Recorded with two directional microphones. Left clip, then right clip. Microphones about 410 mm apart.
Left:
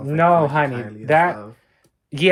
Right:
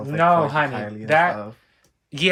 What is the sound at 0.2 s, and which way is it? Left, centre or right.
Speech, centre.